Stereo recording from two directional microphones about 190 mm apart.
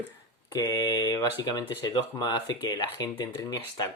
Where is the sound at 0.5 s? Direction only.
20° left (ahead or behind).